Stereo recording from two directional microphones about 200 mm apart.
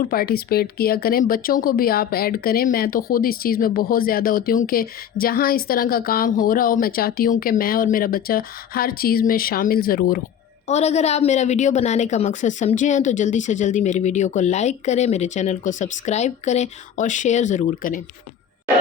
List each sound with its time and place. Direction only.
0.1 s speech: 50° left (ahead or behind)
10.7 s a woman's voice: 35° left (ahead or behind)